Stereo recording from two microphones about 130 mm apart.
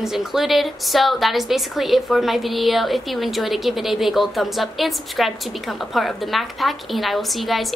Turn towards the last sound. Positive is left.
turn(degrees=0)  # may be behind; listen again after turning